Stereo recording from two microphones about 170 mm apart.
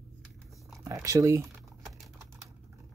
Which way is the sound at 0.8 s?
20° right (ahead or behind).